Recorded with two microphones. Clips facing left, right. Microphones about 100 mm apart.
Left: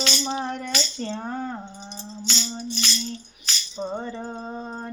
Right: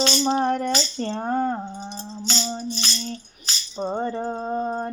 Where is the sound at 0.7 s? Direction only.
35° right (ahead or behind).